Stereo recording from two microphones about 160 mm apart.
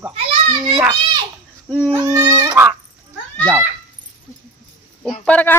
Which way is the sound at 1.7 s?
10° right (ahead or behind).